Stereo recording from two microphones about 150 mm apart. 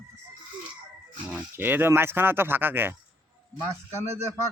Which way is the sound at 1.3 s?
10° right (ahead or behind).